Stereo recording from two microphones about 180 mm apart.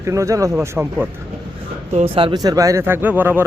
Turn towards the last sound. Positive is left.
turn(degrees=-10)  # may be behind; listen again after turning